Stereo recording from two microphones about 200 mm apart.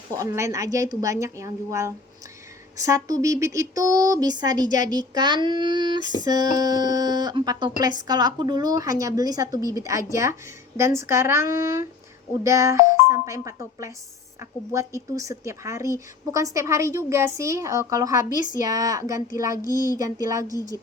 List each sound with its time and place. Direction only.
0.2 s speech: 15° right (ahead or behind)